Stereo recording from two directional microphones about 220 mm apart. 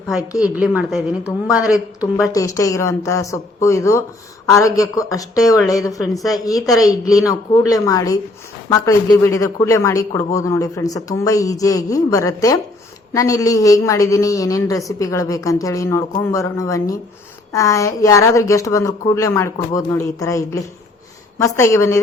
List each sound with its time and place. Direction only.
0.1 s a woman's voice: 5° right (ahead or behind)
2.2 s a woman's voice: 15° left (ahead or behind)